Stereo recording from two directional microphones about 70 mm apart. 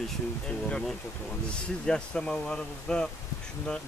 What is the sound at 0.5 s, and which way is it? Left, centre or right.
Speech, centre.